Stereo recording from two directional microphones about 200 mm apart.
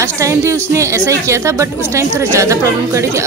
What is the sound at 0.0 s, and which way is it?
A woman's voice, 15° right (ahead or behind).